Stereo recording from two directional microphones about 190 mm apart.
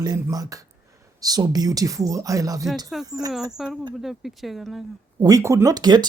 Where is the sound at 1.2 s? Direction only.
20° right (ahead or behind).